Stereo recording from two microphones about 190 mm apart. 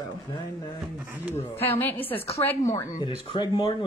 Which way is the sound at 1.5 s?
10° left (ahead or behind).